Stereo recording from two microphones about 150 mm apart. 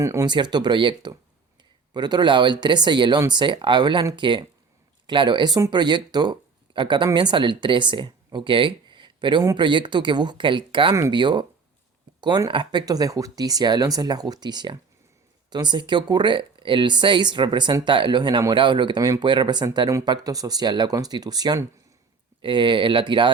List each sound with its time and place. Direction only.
0.0 s speech: 20° right (ahead or behind)
0.3 s speech: 30° right (ahead or behind)